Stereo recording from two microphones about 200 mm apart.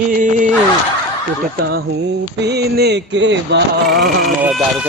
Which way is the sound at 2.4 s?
55° right (ahead or behind).